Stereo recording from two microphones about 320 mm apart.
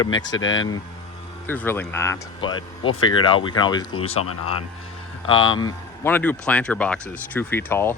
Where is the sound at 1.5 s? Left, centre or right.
Centre.